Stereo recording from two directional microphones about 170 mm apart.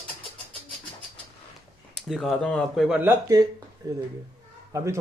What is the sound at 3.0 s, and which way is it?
A man's voice, 10° right (ahead or behind).